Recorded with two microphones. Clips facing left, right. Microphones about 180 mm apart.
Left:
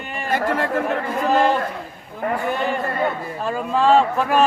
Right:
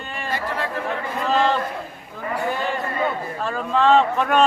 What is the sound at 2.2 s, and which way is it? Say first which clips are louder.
Speech: left 5 dB; 60° left (ahead or behind).